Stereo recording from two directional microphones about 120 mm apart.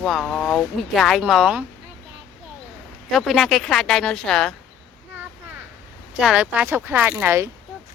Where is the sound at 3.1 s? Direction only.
Centre (ahead or behind).